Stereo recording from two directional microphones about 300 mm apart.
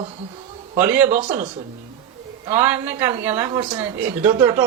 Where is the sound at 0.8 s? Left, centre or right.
Centre.